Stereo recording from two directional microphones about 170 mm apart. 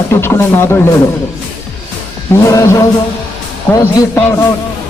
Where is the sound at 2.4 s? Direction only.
20° left (ahead or behind).